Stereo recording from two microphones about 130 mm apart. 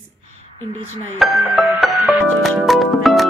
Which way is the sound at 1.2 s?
Centre (ahead or behind).